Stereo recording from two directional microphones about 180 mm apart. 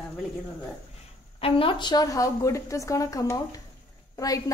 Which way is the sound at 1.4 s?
30° left (ahead or behind).